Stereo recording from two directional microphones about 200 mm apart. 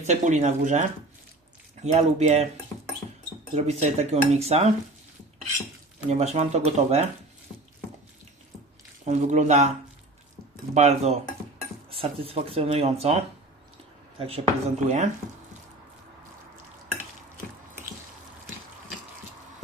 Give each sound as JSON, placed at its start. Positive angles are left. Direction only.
{"t": 0.0, "sound": "speech", "side_deg": -35}
{"t": 3.5, "sound": "speech", "side_deg": -35}
{"t": 6.1, "sound": "speech", "side_deg": -35}
{"t": 9.0, "sound": "speech", "side_deg": -35}
{"t": 10.8, "sound": "speech", "side_deg": -35}
{"t": 14.2, "sound": "speech", "side_deg": -30}